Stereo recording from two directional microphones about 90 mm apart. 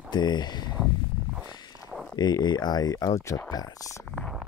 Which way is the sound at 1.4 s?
50° left (ahead or behind).